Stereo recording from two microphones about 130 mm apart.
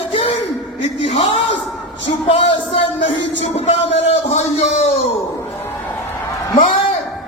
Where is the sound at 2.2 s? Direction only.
50° left (ahead or behind).